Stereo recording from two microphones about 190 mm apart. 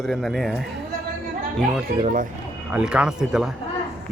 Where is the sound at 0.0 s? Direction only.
Centre (ahead or behind).